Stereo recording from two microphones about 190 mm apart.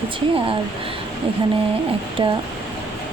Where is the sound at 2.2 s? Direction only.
25° right (ahead or behind).